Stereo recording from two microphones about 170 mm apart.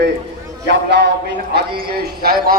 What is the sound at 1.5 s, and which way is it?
Speech, 70° right (ahead or behind).